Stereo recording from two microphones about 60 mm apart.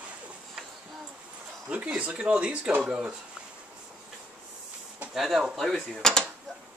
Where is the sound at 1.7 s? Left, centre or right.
Right.